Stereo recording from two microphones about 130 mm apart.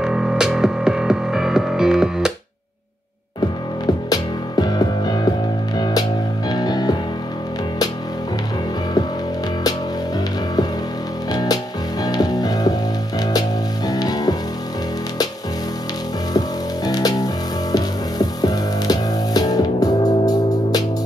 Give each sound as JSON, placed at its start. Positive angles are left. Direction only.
{"t": 0.0, "sound": "music", "side_deg": -5}
{"t": 3.8, "sound": "music", "side_deg": 30}
{"t": 6.5, "sound": "music", "side_deg": 30}
{"t": 11.3, "sound": "music", "side_deg": 30}
{"t": 16.3, "sound": "music", "side_deg": 30}